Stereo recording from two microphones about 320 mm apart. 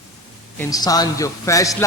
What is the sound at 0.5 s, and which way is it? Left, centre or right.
A man's voice, centre.